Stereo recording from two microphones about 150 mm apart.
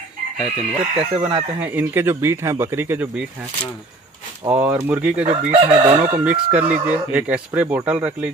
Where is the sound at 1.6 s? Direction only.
10° right (ahead or behind).